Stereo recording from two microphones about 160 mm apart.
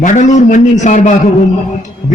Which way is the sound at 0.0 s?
50° left (ahead or behind).